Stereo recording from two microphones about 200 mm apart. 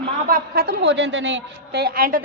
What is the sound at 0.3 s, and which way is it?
A woman's voice, 45° right (ahead or behind).